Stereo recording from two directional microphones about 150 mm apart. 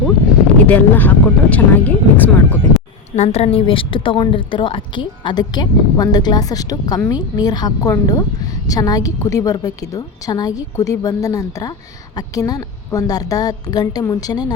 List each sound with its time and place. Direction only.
0.7 s speech: 10° left (ahead or behind)
3.2 s a woman's voice: 45° left (ahead or behind); by 14.5 s 25° left (ahead or behind)